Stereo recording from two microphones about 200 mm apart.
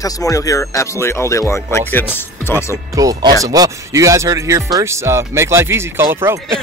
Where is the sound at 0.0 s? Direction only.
15° left (ahead or behind).